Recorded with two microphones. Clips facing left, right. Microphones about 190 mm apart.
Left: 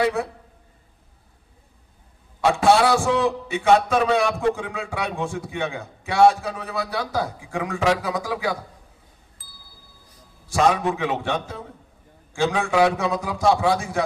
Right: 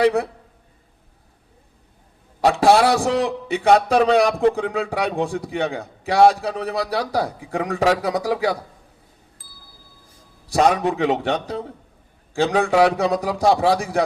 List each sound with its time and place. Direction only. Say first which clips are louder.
2.4 s a man's voice: right 2 dB; 35° right (ahead or behind)
9.4 s a sound: right 2 dB; centre (ahead or behind)
10.5 s a man's voice: right 2 dB; 35° right (ahead or behind)